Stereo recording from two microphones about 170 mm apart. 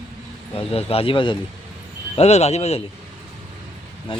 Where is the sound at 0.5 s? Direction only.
35° left (ahead or behind).